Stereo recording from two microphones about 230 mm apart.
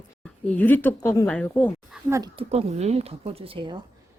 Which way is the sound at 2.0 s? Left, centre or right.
Centre.